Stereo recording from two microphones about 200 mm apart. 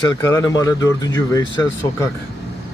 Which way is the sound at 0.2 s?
15° left (ahead or behind).